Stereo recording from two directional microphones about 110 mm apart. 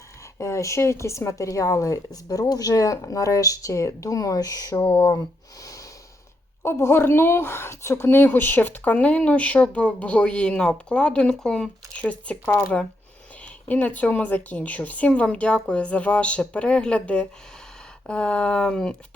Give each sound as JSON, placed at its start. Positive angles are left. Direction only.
{"t": 0.3, "sound": "speech", "side_deg": 25}
{"t": 4.9, "sound": "speech", "side_deg": 50}
{"t": 6.6, "sound": "a woman's voice", "side_deg": 25}
{"t": 13.4, "sound": "a woman's voice", "side_deg": 15}